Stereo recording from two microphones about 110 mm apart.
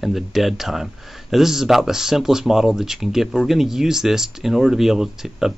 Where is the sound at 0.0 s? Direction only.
Centre (ahead or behind).